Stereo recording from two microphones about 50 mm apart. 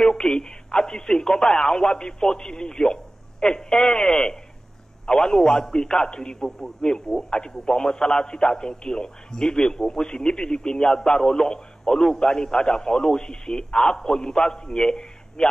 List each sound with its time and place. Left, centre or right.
0.0 s a man's voice: centre